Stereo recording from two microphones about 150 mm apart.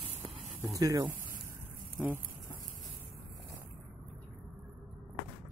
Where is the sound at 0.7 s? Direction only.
25° right (ahead or behind).